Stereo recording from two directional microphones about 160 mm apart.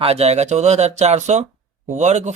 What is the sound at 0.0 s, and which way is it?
Speech, 40° right (ahead or behind).